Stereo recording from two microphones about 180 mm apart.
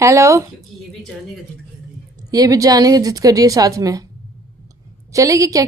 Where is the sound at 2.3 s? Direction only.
20° right (ahead or behind).